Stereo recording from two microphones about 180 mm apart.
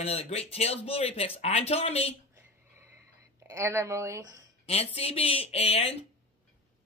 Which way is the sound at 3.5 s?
15° right (ahead or behind).